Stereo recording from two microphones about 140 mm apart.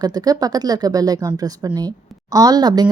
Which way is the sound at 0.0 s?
25° right (ahead or behind).